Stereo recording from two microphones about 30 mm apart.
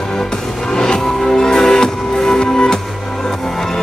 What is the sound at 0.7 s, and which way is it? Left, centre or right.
Music, left.